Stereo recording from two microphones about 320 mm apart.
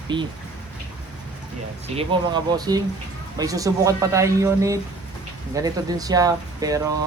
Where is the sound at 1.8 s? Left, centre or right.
Centre.